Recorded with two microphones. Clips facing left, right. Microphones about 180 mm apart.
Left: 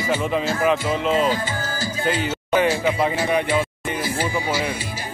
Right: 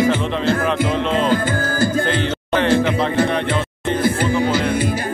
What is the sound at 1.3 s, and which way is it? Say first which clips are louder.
Music: right 6 dB; 55° right (ahead or behind).